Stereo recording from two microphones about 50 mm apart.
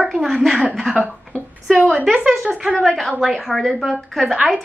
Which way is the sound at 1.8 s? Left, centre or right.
Right.